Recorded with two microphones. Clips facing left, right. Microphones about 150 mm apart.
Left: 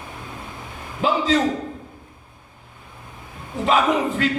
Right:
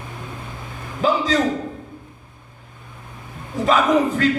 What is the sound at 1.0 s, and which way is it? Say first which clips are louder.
Speech: right 2 dB; 40° right (ahead or behind).